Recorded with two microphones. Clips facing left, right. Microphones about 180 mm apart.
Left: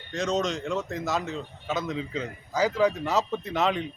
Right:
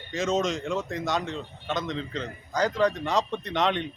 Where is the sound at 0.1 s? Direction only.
Centre (ahead or behind).